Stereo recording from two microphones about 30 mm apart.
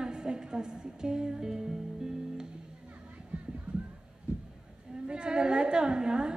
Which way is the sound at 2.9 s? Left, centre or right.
Right.